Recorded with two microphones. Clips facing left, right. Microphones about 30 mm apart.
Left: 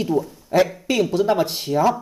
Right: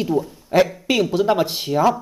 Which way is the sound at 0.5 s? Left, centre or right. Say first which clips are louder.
Right 1 dB; right.